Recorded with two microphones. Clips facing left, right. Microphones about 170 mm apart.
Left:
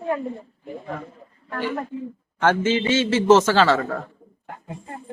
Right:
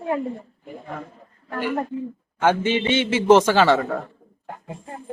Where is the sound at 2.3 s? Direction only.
15° right (ahead or behind).